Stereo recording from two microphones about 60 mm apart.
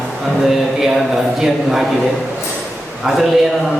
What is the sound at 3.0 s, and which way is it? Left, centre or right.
Speech, centre.